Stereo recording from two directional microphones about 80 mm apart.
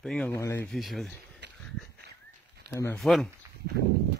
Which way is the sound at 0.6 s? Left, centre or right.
Centre.